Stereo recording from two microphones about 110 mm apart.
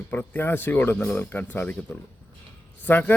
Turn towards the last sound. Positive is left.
turn(degrees=15)  # may be behind; listen again after turning